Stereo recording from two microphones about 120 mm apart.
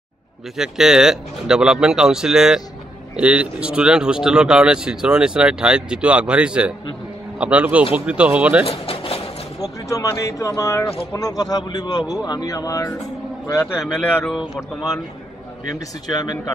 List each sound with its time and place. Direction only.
0.6 s speech: 5° right (ahead or behind)
8.6 s speech: 50° left (ahead or behind)
9.6 s a man's voice: 30° left (ahead or behind)
13.7 s speech: 5° right (ahead or behind)
16.1 s a man's voice: 35° left (ahead or behind)